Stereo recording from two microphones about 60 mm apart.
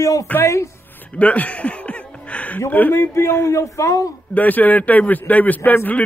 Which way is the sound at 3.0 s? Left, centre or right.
Left.